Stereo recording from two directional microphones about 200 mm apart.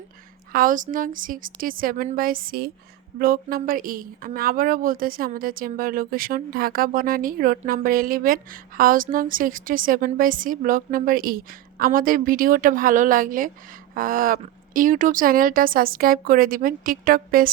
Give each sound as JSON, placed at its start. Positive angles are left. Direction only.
{"t": 0.5, "sound": "a woman's voice", "side_deg": -45}